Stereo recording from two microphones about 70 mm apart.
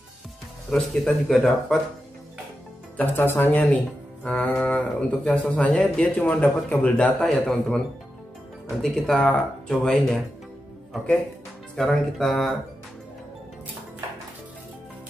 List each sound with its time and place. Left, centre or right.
0.7 s speech: centre
3.0 s speech: left
7.2 s a man's voice: centre
11.7 s speech: centre